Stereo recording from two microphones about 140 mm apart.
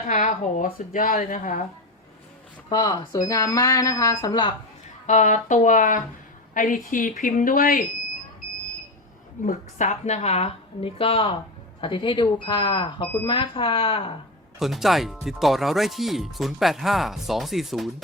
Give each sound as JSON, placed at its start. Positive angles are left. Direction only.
{"t": 0.1, "sound": "a woman's voice", "side_deg": 60}
{"t": 2.6, "sound": "speech", "side_deg": 30}
{"t": 5.0, "sound": "a woman's voice", "side_deg": 60}
{"t": 9.4, "sound": "a woman's voice", "side_deg": 60}
{"t": 14.6, "sound": "speech", "side_deg": 0}